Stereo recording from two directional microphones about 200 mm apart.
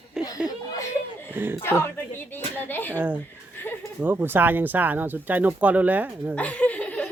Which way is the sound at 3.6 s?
10° left (ahead or behind).